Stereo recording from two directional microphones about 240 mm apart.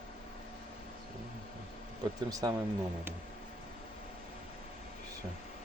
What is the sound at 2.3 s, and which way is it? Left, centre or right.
Speech, centre.